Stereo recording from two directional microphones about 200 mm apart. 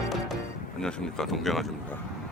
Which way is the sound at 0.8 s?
5° left (ahead or behind).